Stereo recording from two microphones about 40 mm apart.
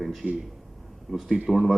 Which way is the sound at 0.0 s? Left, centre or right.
Centre.